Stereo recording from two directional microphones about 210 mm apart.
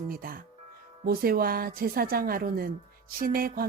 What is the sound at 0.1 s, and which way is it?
Speech, 45° right (ahead or behind).